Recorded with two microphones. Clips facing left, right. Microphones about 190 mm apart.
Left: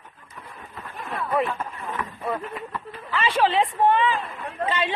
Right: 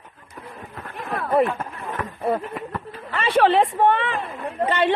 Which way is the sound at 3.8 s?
65° right (ahead or behind).